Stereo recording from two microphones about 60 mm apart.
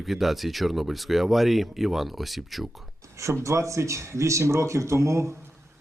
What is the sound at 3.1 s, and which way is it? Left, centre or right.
Speech, right.